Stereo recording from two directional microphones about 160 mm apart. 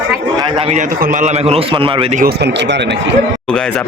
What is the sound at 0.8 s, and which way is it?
A man's voice, 55° right (ahead or behind).